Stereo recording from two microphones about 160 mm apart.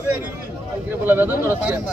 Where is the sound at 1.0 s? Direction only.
15° right (ahead or behind).